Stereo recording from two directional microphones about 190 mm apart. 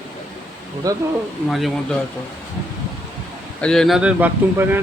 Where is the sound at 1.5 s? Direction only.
Centre (ahead or behind).